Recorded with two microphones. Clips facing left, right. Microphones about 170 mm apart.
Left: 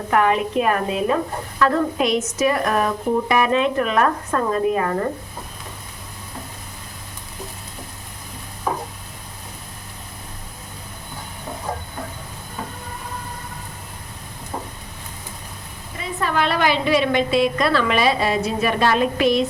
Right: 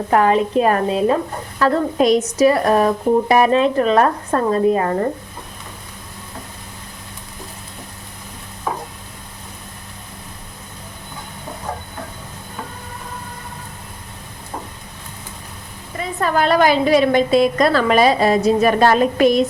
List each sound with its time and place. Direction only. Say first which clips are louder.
0.1 s speech: right 3 dB; 35° right (ahead or behind)
16.2 s a woman's voice: right 5 dB; 45° right (ahead or behind)